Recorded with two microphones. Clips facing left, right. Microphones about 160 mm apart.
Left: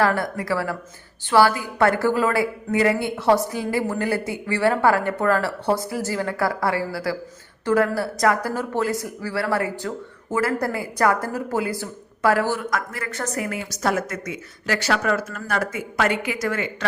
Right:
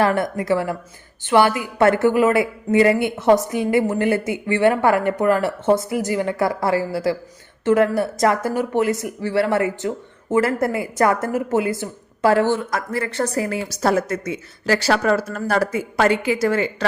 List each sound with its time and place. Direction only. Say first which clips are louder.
0.0 s speech: right 2 dB; 20° right (ahead or behind)